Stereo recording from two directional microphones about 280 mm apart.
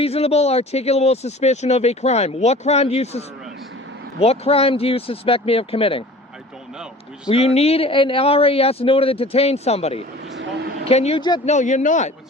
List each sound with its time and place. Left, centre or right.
0.0 s speech: left
7.3 s speech: left
10.3 s vehicle: right
10.8 s speech: left